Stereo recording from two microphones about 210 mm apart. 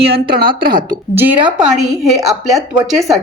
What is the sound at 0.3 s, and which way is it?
Speech, 45° right (ahead or behind).